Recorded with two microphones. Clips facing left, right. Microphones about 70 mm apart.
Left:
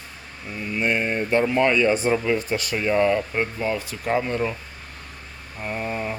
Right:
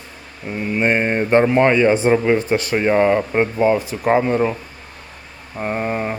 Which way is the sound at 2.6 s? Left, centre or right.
Right.